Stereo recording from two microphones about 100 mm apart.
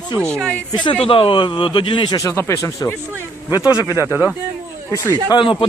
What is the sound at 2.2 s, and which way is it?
Speech, 30° left (ahead or behind).